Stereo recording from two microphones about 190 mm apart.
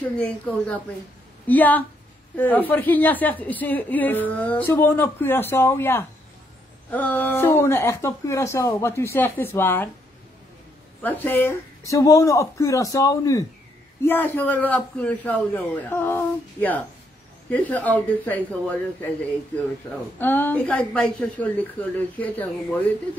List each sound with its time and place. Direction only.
0.0 s a woman's voice: 5° left (ahead or behind)
11.0 s a woman's voice: 10° left (ahead or behind)